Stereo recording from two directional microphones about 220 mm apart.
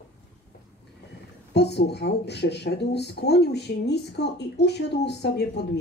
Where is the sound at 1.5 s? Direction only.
50° left (ahead or behind).